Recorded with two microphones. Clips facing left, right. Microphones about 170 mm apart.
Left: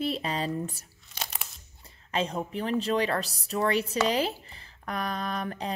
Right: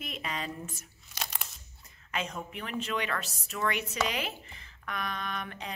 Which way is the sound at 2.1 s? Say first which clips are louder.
Left 6 dB; 30° left (ahead or behind).